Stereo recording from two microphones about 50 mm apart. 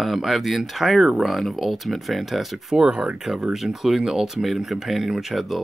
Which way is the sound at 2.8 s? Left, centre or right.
Centre.